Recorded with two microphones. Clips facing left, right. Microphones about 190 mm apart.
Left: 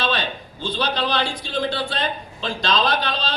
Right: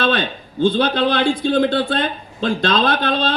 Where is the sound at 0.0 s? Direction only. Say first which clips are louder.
Right 5 dB; 55° right (ahead or behind).